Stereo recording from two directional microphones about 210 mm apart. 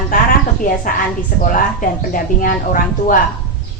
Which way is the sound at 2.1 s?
40° left (ahead or behind).